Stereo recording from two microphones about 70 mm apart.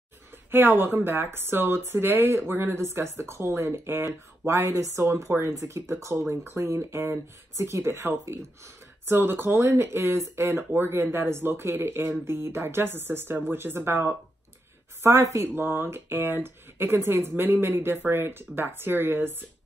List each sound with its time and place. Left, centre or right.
0.5 s speech: right
15.0 s speech: right